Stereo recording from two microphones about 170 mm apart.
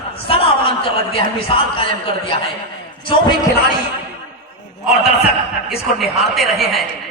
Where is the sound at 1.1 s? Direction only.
30° left (ahead or behind).